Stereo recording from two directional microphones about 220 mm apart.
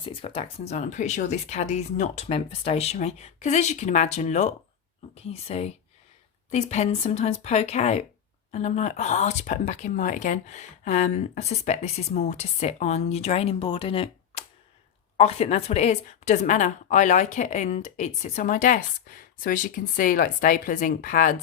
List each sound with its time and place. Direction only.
0.0 s a woman's voice: 25° left (ahead or behind)